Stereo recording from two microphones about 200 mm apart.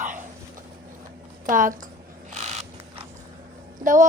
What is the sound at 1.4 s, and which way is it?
Speech, 40° right (ahead or behind).